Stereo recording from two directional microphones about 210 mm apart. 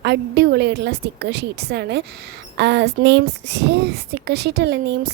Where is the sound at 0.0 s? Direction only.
50° right (ahead or behind).